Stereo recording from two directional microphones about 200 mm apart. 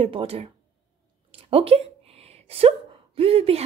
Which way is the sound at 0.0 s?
30° right (ahead or behind).